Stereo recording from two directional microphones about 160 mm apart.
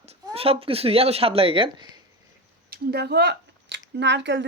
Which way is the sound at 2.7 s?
85° right.